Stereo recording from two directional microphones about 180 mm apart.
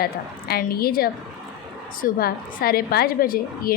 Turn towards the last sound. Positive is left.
turn(degrees=55)  # may be behind; listen again after turning